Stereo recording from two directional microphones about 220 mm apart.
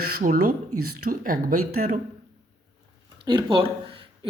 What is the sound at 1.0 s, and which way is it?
Speech, 40° right (ahead or behind).